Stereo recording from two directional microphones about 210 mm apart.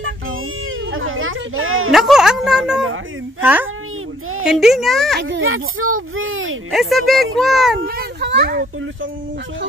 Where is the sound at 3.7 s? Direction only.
80° right.